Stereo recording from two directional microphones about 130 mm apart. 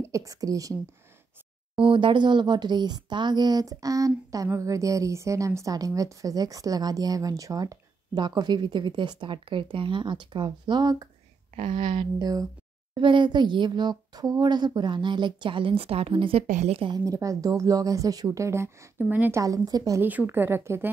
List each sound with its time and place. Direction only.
0.0 s a woman's voice: 25° right (ahead or behind)
1.8 s speech: 40° right (ahead or behind)
16.4 s a woman's voice: 60° right (ahead or behind)
16.9 s a woman's voice: 25° right (ahead or behind)
19.4 s a woman's voice: 30° right (ahead or behind)
20.0 s a woman's voice: 15° right (ahead or behind)